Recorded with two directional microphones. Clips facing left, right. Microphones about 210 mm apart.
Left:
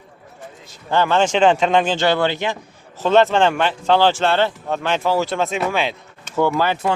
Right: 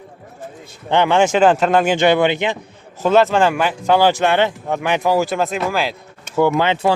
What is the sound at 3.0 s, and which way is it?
Speech, 5° right (ahead or behind).